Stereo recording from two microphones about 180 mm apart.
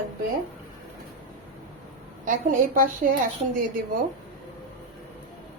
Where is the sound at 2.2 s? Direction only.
45° right (ahead or behind).